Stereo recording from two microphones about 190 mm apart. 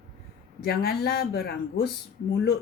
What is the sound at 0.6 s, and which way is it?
Speech, 55° left (ahead or behind).